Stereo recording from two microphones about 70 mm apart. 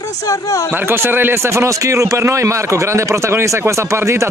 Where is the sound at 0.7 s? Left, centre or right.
Right.